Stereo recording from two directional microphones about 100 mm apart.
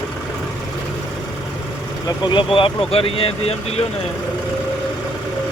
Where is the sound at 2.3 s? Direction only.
55° left (ahead or behind).